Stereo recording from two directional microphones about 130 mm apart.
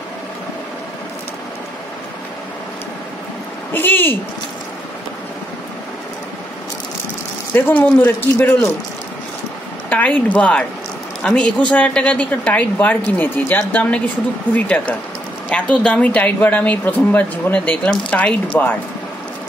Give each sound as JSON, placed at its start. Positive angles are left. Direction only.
{"t": 3.7, "sound": "speech", "side_deg": 15}
{"t": 7.5, "sound": "a woman's voice", "side_deg": 15}
{"t": 9.8, "sound": "a woman's voice", "side_deg": 10}